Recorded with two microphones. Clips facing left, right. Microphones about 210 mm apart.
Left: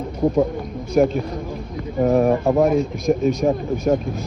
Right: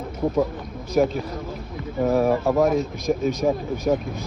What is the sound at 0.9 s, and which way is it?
Speech, centre (ahead or behind).